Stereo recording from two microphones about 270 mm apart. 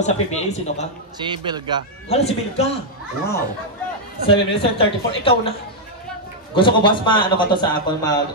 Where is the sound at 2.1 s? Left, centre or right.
Left.